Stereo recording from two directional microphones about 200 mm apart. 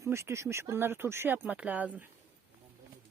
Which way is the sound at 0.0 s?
15° right (ahead or behind).